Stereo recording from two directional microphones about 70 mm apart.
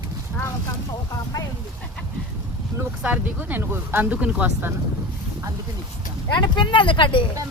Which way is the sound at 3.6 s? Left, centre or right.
Right.